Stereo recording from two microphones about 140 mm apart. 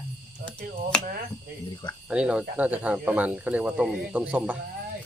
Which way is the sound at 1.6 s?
35° left (ahead or behind).